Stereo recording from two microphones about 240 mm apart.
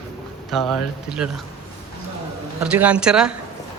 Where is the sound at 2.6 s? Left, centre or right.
Centre.